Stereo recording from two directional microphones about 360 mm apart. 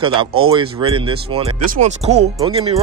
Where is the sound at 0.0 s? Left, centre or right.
Centre.